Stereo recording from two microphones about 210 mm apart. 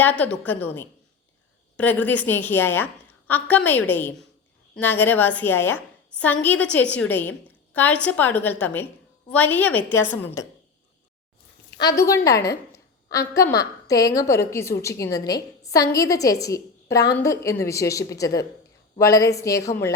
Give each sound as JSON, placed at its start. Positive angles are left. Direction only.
{"t": 0.0, "sound": "a woman's voice", "side_deg": 5}
{"t": 11.8, "sound": "a woman's voice", "side_deg": 15}